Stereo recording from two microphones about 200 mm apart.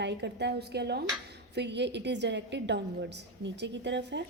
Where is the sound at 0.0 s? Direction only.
60° right (ahead or behind).